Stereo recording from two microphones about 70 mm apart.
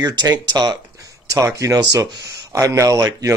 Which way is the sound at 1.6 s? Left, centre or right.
Right.